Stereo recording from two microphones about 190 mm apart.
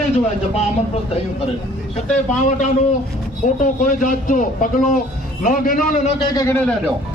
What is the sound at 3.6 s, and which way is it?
A man's voice, 45° left (ahead or behind).